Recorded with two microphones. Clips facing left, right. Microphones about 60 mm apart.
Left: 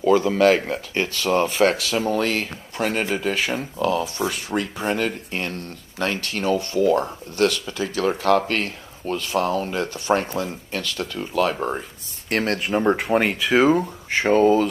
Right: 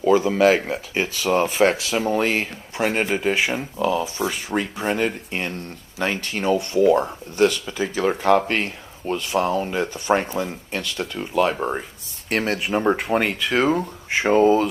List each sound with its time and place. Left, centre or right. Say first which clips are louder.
0.0 s speech: even; centre
4.9 s speech: right 1 dB; centre
9.7 s speech: right 1 dB; centre